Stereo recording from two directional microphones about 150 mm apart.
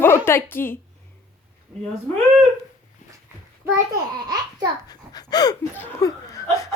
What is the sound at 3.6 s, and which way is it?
A child's voice, 20° right (ahead or behind).